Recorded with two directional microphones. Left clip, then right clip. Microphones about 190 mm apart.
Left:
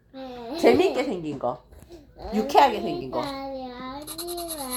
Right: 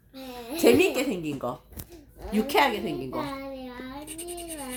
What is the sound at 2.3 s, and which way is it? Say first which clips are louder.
Speech: left 4 dB; 50° right (ahead or behind).